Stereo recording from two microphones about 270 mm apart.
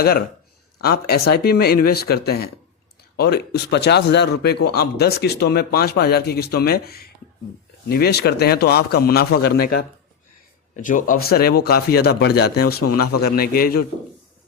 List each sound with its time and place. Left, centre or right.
0.8 s speech: left
12.8 s a man's voice: left
13.2 s speech: left